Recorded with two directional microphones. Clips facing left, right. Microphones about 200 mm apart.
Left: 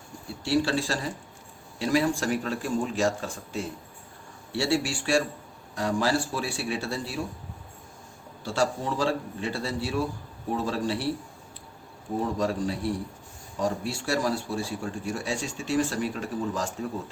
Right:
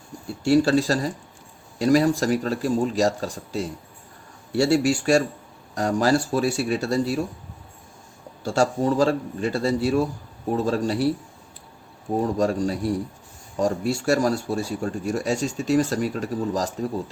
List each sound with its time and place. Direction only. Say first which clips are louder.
0.4 s a man's voice: right 7 dB; 45° right (ahead or behind)
8.4 s a man's voice: right 6 dB; 45° right (ahead or behind)
12.2 s a man's voice: right 5 dB; 45° right (ahead or behind)